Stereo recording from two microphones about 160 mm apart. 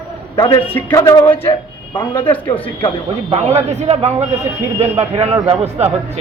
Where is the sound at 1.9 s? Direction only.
30° left (ahead or behind).